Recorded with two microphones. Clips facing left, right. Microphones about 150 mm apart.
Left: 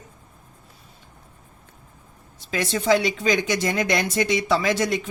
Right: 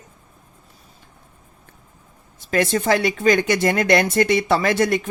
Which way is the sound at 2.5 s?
55° right (ahead or behind).